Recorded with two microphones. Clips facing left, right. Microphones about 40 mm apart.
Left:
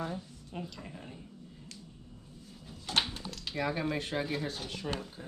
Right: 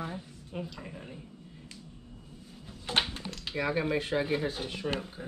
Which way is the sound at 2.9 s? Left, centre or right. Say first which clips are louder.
Right 2 dB; centre.